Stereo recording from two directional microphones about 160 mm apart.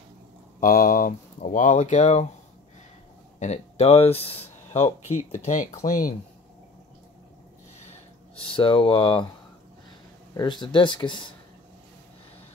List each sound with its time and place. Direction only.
0.6 s speech: 60° left (ahead or behind)
3.3 s speech: 45° left (ahead or behind)
8.4 s speech: 35° left (ahead or behind)
10.3 s speech: 30° left (ahead or behind)